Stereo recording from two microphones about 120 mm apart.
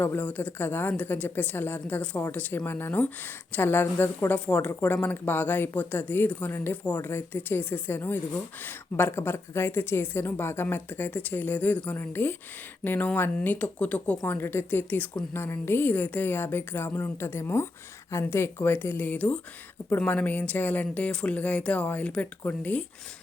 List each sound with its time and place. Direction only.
0.0 s speech: 15° left (ahead or behind)